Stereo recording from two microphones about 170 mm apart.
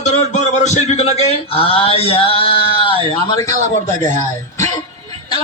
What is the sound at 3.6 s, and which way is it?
Speech, 45° right (ahead or behind).